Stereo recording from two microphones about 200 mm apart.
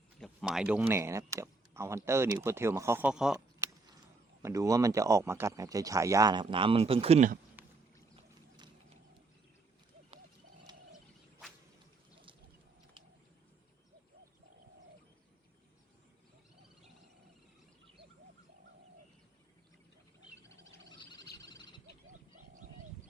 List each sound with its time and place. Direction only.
0.2 s speech: centre (ahead or behind)
4.4 s speech: 15° right (ahead or behind); by 7.3 s 35° right (ahead or behind)
7.6 s a sound: 10° right (ahead or behind)
8.1 s boat: 20° right (ahead or behind)
21.4 s owl: 60° right (ahead or behind)